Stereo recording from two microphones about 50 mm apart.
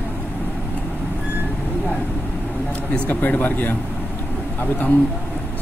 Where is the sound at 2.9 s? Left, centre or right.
Left.